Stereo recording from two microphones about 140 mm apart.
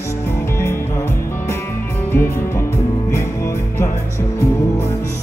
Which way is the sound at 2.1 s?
15° left (ahead or behind).